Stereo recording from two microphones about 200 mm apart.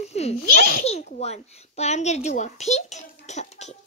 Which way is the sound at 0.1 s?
30° left (ahead or behind).